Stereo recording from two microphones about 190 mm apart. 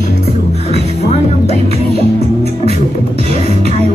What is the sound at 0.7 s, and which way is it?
Music, 35° left (ahead or behind).